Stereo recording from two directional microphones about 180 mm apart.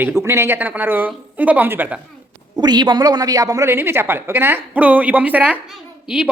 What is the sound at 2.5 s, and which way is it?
A woman's voice, 25° right (ahead or behind).